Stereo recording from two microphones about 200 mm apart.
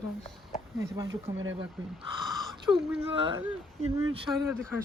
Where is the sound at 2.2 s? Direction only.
Centre (ahead or behind).